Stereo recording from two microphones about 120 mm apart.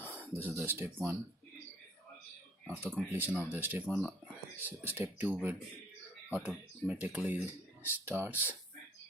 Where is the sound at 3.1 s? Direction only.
15° right (ahead or behind).